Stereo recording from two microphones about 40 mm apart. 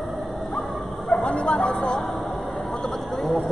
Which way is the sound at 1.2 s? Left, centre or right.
Left.